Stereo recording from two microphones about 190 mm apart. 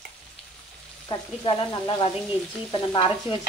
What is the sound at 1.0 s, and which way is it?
Stir, 25° left (ahead or behind).